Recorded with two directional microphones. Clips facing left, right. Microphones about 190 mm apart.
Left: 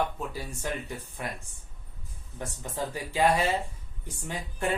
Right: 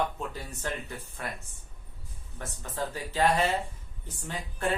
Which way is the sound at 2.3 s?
15° left (ahead or behind).